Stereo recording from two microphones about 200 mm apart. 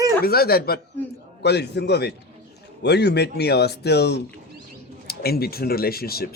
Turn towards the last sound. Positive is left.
turn(degrees=50)  # may be behind; listen again after turning